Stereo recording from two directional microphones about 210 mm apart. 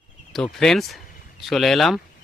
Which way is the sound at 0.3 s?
Centre (ahead or behind).